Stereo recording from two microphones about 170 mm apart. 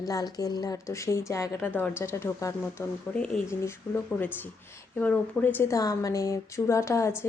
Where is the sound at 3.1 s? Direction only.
5° left (ahead or behind).